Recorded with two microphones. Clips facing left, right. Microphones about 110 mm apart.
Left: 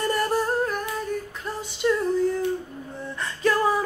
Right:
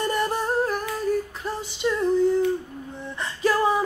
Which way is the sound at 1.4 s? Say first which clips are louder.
Even; centre (ahead or behind).